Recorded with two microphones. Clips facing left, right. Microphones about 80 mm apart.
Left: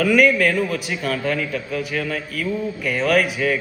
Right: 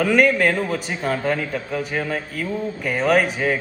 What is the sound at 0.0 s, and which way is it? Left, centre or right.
A man's voice, right.